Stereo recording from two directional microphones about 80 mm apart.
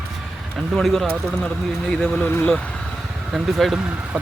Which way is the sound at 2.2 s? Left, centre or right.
Left.